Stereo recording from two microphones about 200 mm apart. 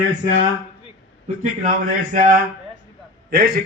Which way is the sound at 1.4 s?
40° right (ahead or behind).